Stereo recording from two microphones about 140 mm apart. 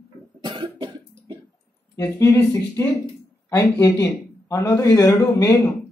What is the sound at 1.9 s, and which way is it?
A man's voice, 20° left (ahead or behind).